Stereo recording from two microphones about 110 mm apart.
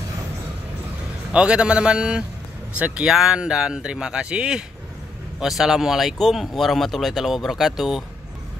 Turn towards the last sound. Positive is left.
turn(degrees=0)  # may be behind; listen again after turning